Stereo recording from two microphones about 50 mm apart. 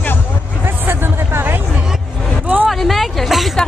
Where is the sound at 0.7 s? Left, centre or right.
Right.